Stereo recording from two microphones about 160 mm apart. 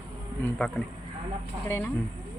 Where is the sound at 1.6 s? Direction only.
15° left (ahead or behind).